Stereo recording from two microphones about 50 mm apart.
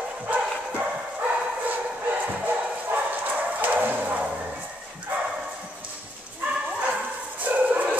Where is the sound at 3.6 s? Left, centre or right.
Right.